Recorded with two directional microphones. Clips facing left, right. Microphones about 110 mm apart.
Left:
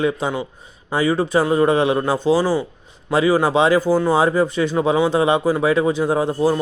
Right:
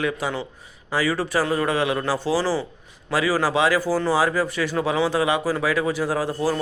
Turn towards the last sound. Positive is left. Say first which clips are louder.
# left 5 dB
turn(degrees=20)  # may be behind; listen again after turning